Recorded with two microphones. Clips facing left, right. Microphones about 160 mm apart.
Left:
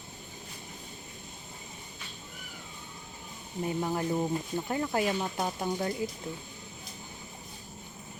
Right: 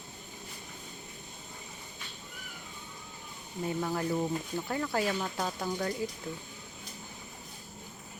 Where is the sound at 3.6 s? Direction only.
20° left (ahead or behind).